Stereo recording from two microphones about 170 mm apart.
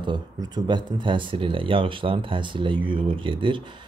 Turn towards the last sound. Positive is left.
turn(degrees=-30)  # may be behind; listen again after turning